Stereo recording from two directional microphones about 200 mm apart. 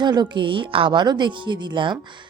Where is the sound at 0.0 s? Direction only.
20° right (ahead or behind).